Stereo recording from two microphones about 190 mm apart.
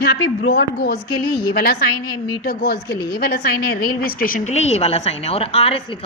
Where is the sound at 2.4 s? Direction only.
55° left (ahead or behind).